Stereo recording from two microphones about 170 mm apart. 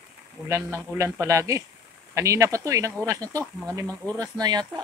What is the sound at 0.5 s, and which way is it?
Mantra, 15° right (ahead or behind).